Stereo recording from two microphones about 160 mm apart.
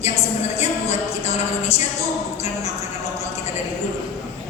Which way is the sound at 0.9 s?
40° left (ahead or behind).